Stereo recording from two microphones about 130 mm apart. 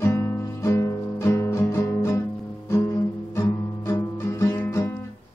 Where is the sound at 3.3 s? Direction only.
20° left (ahead or behind).